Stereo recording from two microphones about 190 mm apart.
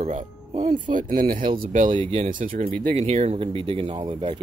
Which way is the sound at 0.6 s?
25° right (ahead or behind).